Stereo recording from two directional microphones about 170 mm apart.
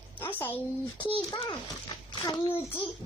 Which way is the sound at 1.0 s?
25° left (ahead or behind).